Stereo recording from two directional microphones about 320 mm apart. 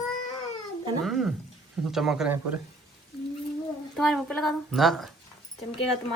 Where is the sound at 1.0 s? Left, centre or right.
Centre.